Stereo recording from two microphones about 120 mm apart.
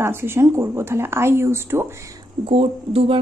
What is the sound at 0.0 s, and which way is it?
A woman's voice, 20° right (ahead or behind).